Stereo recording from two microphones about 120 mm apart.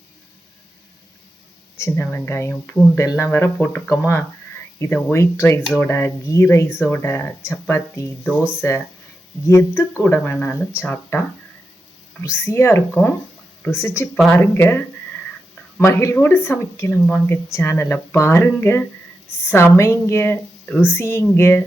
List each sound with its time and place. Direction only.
1.8 s speech: 20° left (ahead or behind)
12.2 s speech: 20° left (ahead or behind)
15.8 s speech: 25° left (ahead or behind)